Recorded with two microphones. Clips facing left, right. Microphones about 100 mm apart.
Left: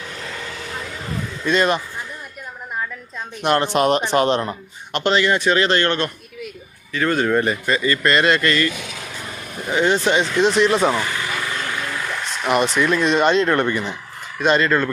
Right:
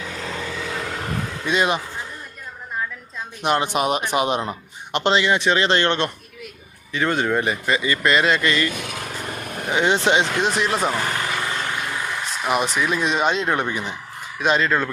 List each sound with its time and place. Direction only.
0.7 s vehicle: 75° right (ahead or behind)
1.5 s speech: 15° right (ahead or behind)
3.4 s speech: 10° right (ahead or behind)
8.2 s speech: centre (ahead or behind)
8.4 s speech: 15° right (ahead or behind)
8.7 s vehicle: 50° right (ahead or behind)
9.7 s speech: 20° right (ahead or behind)
10.4 s speech: 5° right (ahead or behind)
11.0 s vehicle: 40° right (ahead or behind)
11.3 s vehicle: 25° right (ahead or behind); by 13.9 s 5° right (ahead or behind)
14.3 s speech: 5° right (ahead or behind)